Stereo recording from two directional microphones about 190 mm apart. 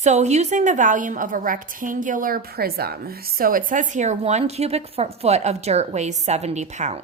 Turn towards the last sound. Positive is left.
turn(degrees=-35)  # may be behind; listen again after turning